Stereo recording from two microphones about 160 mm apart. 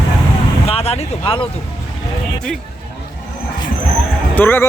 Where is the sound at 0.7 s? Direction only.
40° left (ahead or behind).